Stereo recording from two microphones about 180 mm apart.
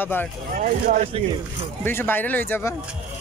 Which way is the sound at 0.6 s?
45° right (ahead or behind).